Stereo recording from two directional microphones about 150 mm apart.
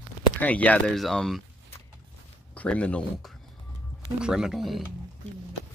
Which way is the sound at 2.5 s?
10° left (ahead or behind).